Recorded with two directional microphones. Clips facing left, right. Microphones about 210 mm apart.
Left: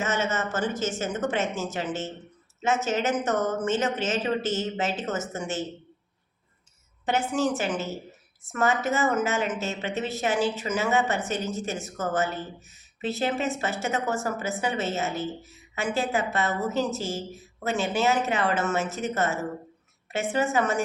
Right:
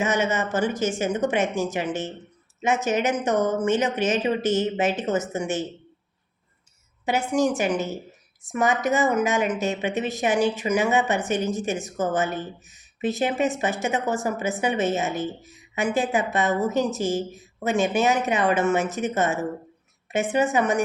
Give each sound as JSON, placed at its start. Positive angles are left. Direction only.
{"t": 0.0, "sound": "a woman's voice", "side_deg": -15}
{"t": 7.0, "sound": "a woman's voice", "side_deg": -10}